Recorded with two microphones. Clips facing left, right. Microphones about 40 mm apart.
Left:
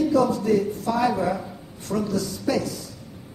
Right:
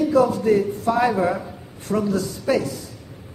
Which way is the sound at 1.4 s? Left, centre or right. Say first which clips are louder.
Right 1 dB; centre.